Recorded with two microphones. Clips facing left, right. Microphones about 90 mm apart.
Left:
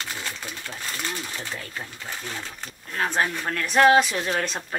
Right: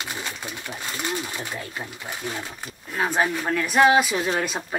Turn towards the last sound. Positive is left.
turn(degrees=-10)  # may be behind; listen again after turning